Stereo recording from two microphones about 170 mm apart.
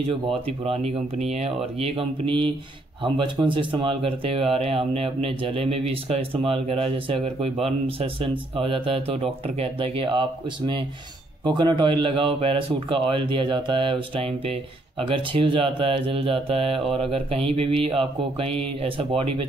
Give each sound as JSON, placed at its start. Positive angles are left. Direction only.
{"t": 0.1, "sound": "speech", "side_deg": -35}